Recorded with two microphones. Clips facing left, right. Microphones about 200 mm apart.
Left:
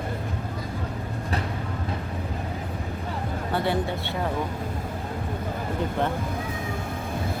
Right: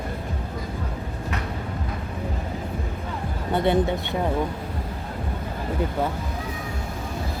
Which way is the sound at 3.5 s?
20° right (ahead or behind).